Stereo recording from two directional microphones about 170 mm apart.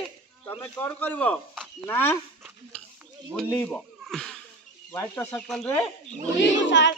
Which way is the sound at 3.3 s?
5° left (ahead or behind).